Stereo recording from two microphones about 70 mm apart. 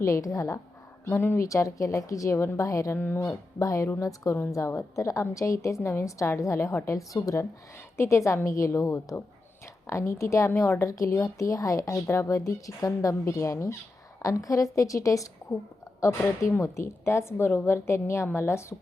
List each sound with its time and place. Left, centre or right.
0.0 s speech: left
1.0 s a woman's voice: left
1.5 s speech: left
7.9 s a woman's voice: left
10.8 s speech: left
16.4 s a woman's voice: left